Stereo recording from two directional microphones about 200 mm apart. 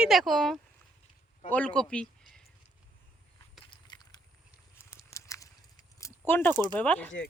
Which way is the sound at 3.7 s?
20° left (ahead or behind).